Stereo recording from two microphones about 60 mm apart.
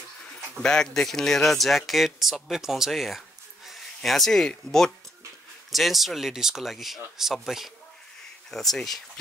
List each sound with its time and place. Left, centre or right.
0.6 s speech: centre
5.7 s speech: centre